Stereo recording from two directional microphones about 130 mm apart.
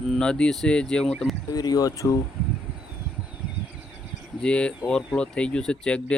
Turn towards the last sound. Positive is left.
turn(degrees=10)  # may be behind; listen again after turning